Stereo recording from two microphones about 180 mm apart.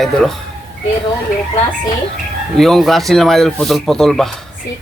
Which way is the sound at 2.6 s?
Centre (ahead or behind).